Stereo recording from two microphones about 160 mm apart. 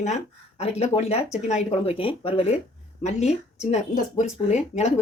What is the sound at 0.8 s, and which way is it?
Speech, 40° left (ahead or behind).